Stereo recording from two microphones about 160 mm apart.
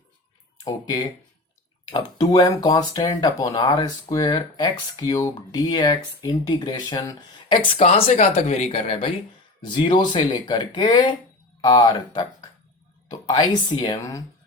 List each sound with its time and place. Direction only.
0.6 s speech: 25° left (ahead or behind)
8.3 s speech: 45° left (ahead or behind)
9.6 s speech: 30° left (ahead or behind)